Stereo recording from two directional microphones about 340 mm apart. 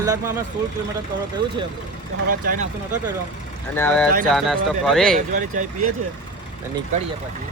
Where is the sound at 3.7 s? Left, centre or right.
Centre.